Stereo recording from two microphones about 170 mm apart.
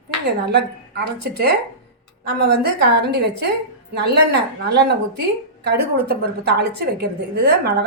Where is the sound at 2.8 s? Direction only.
75° right (ahead or behind).